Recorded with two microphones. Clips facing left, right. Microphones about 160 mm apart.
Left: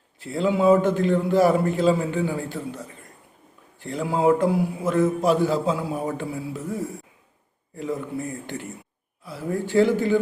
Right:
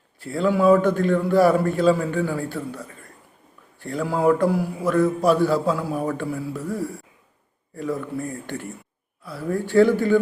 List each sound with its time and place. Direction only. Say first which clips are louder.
0.2 s a man's voice: right 1 dB; 20° left (ahead or behind)